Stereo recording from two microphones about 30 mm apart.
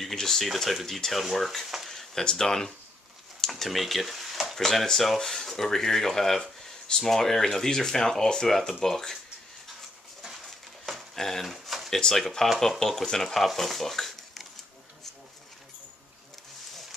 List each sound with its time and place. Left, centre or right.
0.1 s speech: centre
0.4 s speech: centre
1.9 s speech: centre
3.3 s a sound: centre
4.6 s speech: centre
11.1 s speech: centre
11.4 s a sound: centre
12.1 s speech: centre
13.6 s a sound: centre